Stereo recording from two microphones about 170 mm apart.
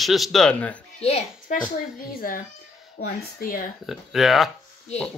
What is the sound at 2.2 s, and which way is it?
A child's voice, 55° left (ahead or behind).